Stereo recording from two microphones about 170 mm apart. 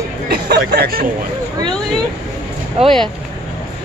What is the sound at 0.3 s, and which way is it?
Speech, 65° right (ahead or behind).